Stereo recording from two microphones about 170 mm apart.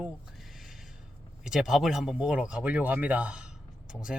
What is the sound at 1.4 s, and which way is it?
Speech, 5° right (ahead or behind).